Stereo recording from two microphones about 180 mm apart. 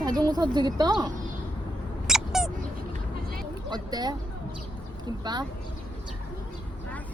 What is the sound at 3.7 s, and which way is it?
Speech, 20° right (ahead or behind).